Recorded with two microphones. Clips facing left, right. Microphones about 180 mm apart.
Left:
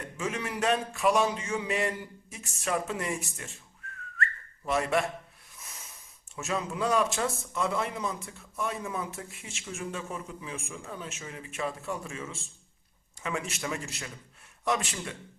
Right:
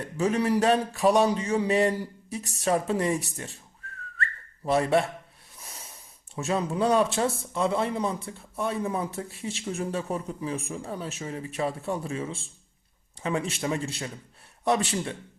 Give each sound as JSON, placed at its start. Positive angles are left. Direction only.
{"t": 0.0, "sound": "speech", "side_deg": -35}
{"t": 3.8, "sound": "whistling", "side_deg": -35}
{"t": 5.5, "sound": "snort", "side_deg": -30}
{"t": 6.3, "sound": "speech", "side_deg": -30}